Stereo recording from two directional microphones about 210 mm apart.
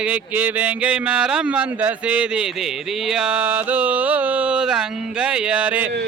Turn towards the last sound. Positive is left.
turn(degrees=-10)  # may be behind; listen again after turning